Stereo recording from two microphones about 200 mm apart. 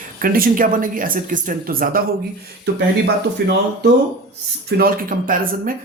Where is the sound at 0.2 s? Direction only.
45° right (ahead or behind).